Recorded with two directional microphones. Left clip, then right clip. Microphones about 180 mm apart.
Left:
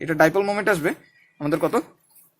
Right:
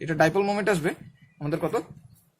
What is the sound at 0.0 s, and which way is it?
Speech, 30° left (ahead or behind).